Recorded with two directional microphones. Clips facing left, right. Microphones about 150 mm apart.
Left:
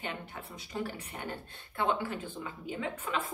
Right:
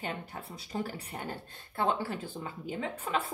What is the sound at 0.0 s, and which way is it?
A woman's voice, 40° right (ahead or behind).